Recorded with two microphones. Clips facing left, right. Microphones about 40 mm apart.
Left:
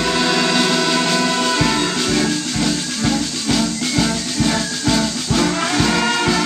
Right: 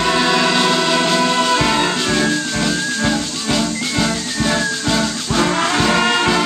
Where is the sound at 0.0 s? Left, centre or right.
Centre.